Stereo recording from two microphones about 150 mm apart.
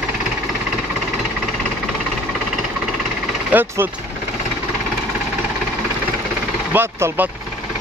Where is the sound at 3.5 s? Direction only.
15° right (ahead or behind).